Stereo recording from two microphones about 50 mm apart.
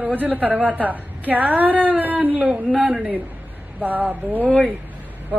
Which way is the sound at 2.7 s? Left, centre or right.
Right.